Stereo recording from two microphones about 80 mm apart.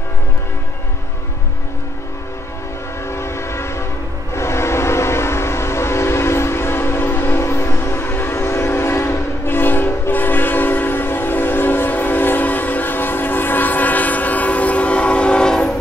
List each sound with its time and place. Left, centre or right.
3.1 s train: left; by 15.7 s centre